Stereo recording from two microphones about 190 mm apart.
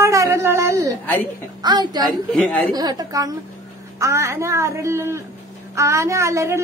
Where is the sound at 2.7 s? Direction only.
20° right (ahead or behind).